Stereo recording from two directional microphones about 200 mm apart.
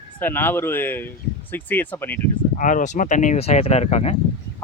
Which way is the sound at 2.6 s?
40° left (ahead or behind).